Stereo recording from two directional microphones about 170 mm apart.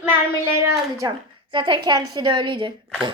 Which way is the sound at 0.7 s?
25° right (ahead or behind).